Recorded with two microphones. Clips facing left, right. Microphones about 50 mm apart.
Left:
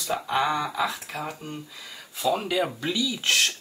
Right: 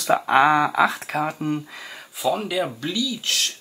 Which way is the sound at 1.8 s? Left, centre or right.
Right.